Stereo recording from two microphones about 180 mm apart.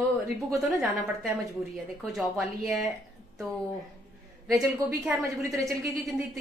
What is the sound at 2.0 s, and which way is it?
Speech, centre (ahead or behind).